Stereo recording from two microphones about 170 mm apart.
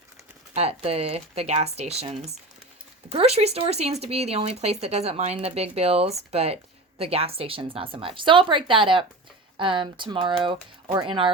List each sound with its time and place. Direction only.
0.5 s speech: 35° right (ahead or behind)
3.1 s speech: 35° right (ahead or behind)